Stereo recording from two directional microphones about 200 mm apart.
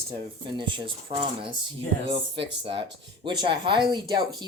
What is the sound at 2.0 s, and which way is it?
Speech, 25° right (ahead or behind).